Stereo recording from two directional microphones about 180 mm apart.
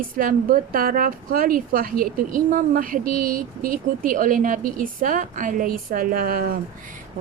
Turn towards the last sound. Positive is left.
turn(degrees=-50)  # may be behind; listen again after turning